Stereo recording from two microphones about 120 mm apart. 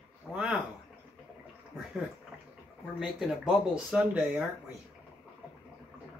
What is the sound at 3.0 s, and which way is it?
Speech, 5° right (ahead or behind).